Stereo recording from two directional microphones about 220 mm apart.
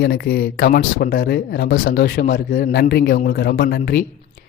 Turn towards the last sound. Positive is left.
turn(degrees=45)  # may be behind; listen again after turning